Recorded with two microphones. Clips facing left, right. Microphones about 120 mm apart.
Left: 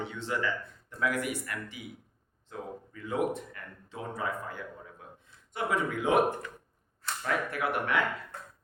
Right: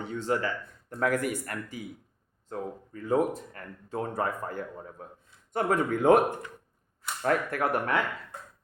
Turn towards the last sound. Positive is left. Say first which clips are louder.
# right 3 dB
turn(degrees=-40)  # may be behind; listen again after turning